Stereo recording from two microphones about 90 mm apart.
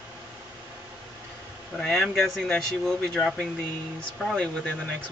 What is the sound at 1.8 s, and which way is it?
Speech, centre (ahead or behind).